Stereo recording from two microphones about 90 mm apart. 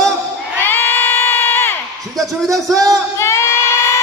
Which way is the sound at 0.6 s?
25° left (ahead or behind).